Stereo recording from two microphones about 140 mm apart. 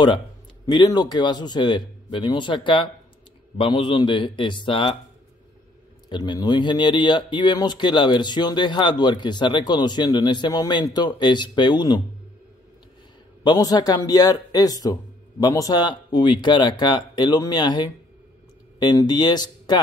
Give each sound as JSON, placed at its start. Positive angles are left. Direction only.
{"t": 0.7, "sound": "speech", "side_deg": 30}
{"t": 6.0, "sound": "speech", "side_deg": 30}
{"t": 13.4, "sound": "speech", "side_deg": 30}